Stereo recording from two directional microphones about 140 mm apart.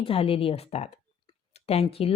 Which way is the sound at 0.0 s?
40° left (ahead or behind).